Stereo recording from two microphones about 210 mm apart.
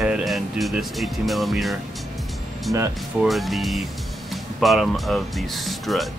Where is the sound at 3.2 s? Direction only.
Centre (ahead or behind).